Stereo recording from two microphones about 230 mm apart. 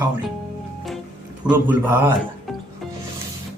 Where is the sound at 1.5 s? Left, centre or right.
Centre.